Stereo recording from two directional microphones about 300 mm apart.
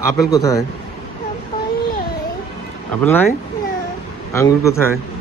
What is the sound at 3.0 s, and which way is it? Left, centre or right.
Speech, centre.